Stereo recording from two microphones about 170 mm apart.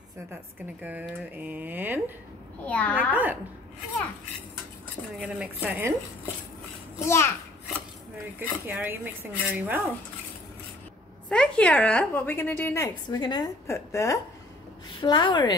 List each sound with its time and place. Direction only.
0.8 s speech: 10° right (ahead or behind)
2.6 s a woman's voice: 10° left (ahead or behind)
5.2 s speech: 10° right (ahead or behind)
7.1 s a woman's voice: 15° left (ahead or behind)
8.4 s speech: 10° right (ahead or behind)
11.2 s a woman's voice: 5° left (ahead or behind)
13.0 s a woman's voice: 25° left (ahead or behind)